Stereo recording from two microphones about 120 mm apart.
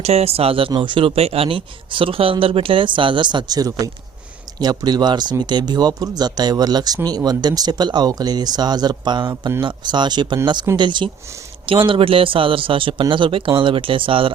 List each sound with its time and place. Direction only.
0.0 s speech: 60° right (ahead or behind); by 14.3 s 45° right (ahead or behind)